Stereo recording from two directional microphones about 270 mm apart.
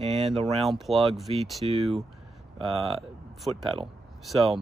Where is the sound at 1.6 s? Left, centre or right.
Right.